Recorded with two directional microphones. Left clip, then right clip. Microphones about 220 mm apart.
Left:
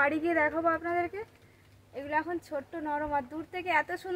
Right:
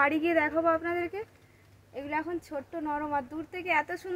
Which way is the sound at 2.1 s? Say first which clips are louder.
Left 2 dB; 25° right (ahead or behind).